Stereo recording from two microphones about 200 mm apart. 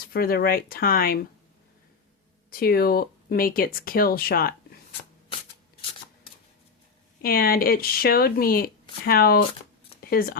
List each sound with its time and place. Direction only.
0.1 s speech: 50° left (ahead or behind)
2.5 s speech: 50° left (ahead or behind)
7.2 s speech: 50° left (ahead or behind)